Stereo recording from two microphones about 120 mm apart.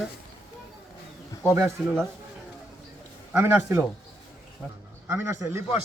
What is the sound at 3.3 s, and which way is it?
Speech, 20° right (ahead or behind).